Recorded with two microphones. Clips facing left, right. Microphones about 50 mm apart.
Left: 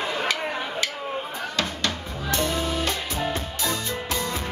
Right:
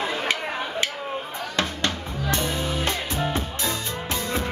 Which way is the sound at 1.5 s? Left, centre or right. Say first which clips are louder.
Right 2 dB; right.